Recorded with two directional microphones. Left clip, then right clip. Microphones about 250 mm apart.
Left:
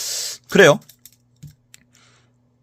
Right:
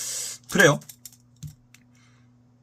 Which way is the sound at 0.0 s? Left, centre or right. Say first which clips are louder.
Left 6 dB; left.